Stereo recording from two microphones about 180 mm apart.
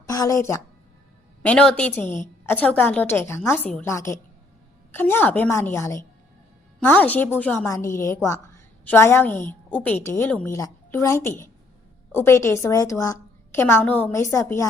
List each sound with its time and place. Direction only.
0.1 s a woman's voice: 20° left (ahead or behind)
1.4 s a woman's voice: 5° left (ahead or behind)